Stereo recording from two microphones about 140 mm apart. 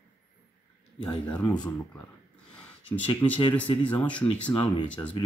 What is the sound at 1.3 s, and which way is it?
Speech, 5° left (ahead or behind).